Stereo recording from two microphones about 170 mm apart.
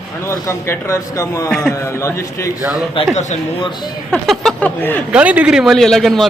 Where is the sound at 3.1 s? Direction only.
45° left (ahead or behind).